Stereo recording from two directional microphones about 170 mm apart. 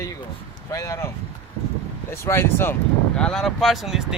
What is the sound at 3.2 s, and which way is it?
Speech, 5° left (ahead or behind).